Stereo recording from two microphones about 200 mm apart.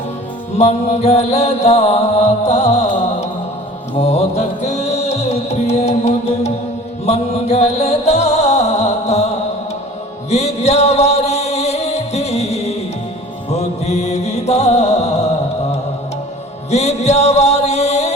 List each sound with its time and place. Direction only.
0.6 s mantra: 35° left (ahead or behind)
3.9 s music: 30° left (ahead or behind)
10.2 s music: 35° left (ahead or behind)
16.7 s music: 35° left (ahead or behind)